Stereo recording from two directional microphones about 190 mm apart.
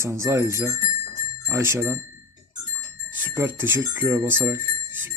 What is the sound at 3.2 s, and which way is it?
Speech, 10° right (ahead or behind).